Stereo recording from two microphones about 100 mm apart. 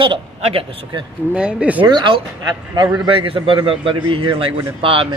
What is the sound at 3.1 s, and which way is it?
A man's voice, 60° right (ahead or behind).